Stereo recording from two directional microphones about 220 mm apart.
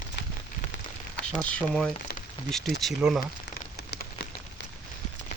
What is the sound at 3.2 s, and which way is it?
Rain on surface, 45° left (ahead or behind).